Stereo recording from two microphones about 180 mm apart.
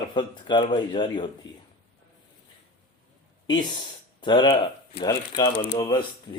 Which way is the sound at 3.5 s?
25° left (ahead or behind).